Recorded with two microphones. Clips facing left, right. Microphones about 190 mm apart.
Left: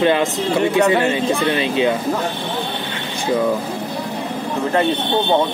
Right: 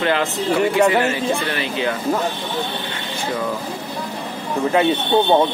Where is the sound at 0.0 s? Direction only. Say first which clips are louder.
Left 3 dB; 20° left (ahead or behind).